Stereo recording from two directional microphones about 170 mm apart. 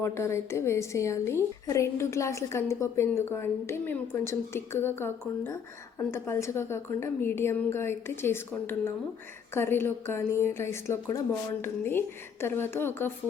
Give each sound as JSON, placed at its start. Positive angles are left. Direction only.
{"t": 0.0, "sound": "a woman's voice", "side_deg": 15}